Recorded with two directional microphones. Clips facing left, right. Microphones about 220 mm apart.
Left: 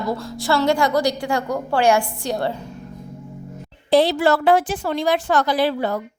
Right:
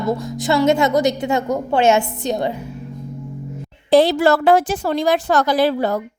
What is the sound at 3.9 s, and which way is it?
A woman's voice, 45° right (ahead or behind).